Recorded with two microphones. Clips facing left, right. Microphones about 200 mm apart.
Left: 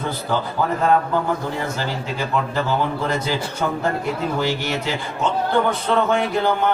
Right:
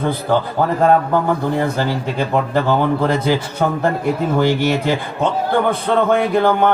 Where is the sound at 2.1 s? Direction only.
50° right (ahead or behind).